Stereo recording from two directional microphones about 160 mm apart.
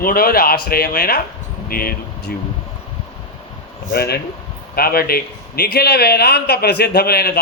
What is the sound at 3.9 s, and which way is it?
Speech, 90° left.